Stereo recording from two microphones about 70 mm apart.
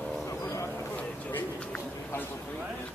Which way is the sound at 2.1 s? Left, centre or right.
Left.